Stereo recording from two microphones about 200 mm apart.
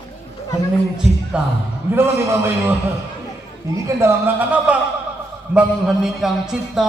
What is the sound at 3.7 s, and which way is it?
A man's voice, 10° right (ahead or behind).